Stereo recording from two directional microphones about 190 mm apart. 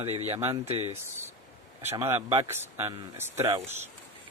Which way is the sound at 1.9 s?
15° right (ahead or behind).